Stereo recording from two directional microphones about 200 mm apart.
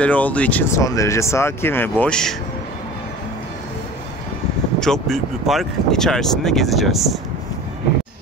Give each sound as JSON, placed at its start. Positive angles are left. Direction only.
{"t": 0.0, "sound": "speech", "side_deg": 5}
{"t": 4.7, "sound": "speech", "side_deg": 5}